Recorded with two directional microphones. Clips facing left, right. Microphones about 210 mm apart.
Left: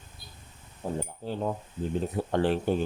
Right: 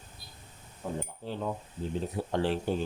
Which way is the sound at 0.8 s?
35° left (ahead or behind).